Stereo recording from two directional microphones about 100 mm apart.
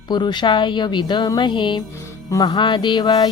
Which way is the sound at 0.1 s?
45° left (ahead or behind).